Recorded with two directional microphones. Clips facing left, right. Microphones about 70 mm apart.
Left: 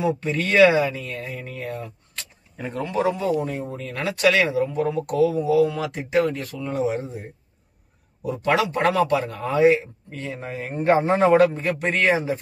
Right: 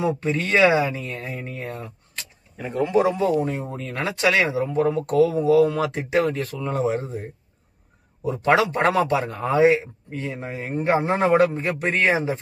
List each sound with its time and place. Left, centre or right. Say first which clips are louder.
0.0 s speech: even; right
2.7 s speech: right 5 dB; centre
3.2 s speech: right 2 dB; right
4.7 s speech: right 7 dB; right
6.7 s speech: even; right
8.3 s speech: right 2 dB; right